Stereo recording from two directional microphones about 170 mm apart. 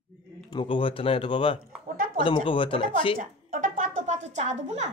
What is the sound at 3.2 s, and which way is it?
Music, 50° right (ahead or behind).